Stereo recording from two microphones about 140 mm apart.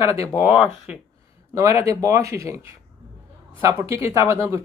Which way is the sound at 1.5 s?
20° right (ahead or behind).